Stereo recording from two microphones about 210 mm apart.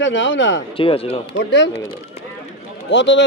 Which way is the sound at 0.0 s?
60° left (ahead or behind).